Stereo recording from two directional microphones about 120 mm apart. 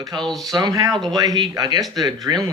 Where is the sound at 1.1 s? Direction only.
35° right (ahead or behind).